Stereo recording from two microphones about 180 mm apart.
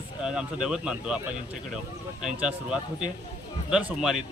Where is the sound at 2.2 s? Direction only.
5° right (ahead or behind).